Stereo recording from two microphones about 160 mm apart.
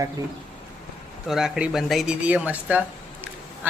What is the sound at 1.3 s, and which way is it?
Speech, centre (ahead or behind).